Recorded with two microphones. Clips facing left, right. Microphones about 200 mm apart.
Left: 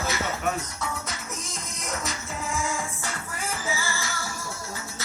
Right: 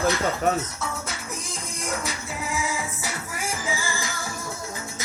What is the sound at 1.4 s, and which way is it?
Music, 30° right (ahead or behind).